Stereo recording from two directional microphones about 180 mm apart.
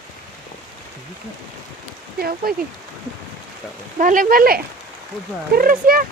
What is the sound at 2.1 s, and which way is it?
Rain on surface, 55° right (ahead or behind).